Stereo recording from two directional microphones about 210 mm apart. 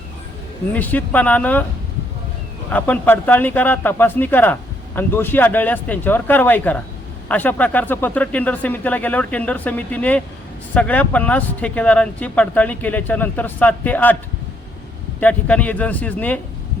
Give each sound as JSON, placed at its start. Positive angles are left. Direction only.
{"t": 0.7, "sound": "speech", "side_deg": 10}
{"t": 2.6, "sound": "speech", "side_deg": 10}
{"t": 15.2, "sound": "speech", "side_deg": 5}